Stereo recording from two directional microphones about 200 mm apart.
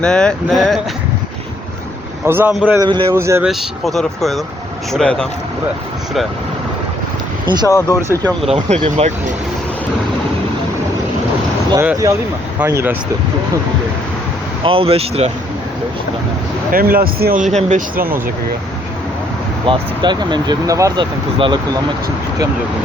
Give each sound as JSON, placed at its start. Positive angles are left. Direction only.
{"t": 0.0, "sound": "speech", "side_deg": 5}
{"t": 2.2, "sound": "speech", "side_deg": -10}
{"t": 2.7, "sound": "speech", "side_deg": -20}
{"t": 3.5, "sound": "speech", "side_deg": 0}
{"t": 7.4, "sound": "speech", "side_deg": -20}
{"t": 7.7, "sound": "speech", "side_deg": 15}
{"t": 8.5, "sound": "speech", "side_deg": -30}
{"t": 11.7, "sound": "speech", "side_deg": -15}
{"t": 14.6, "sound": "speech", "side_deg": -25}
{"t": 16.7, "sound": "speech", "side_deg": -45}
{"t": 19.6, "sound": "speech", "side_deg": -20}